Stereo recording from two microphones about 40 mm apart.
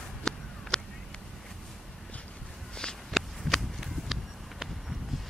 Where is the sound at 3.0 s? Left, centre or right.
Centre.